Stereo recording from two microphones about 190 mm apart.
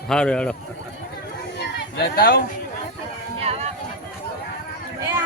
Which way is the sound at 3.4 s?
30° right (ahead or behind).